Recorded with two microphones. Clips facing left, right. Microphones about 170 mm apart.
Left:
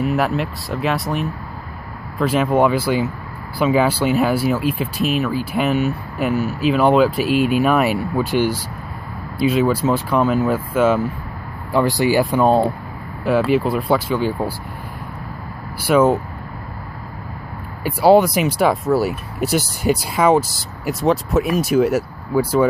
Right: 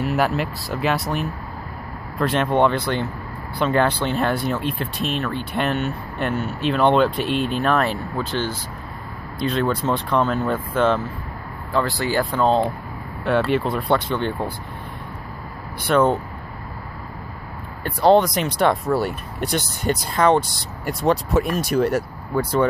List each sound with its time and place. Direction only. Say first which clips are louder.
0.0 s speech: left 2 dB; centre (ahead or behind)
12.0 s speech: left 6 dB; 10° left (ahead or behind)
15.8 s speech: left 3 dB; 5° left (ahead or behind)
17.8 s speech: left 3 dB; 5° left (ahead or behind)